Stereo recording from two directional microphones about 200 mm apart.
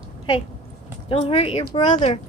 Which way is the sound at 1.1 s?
25° left (ahead or behind).